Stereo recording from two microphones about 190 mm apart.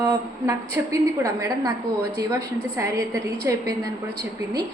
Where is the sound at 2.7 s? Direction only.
15° right (ahead or behind).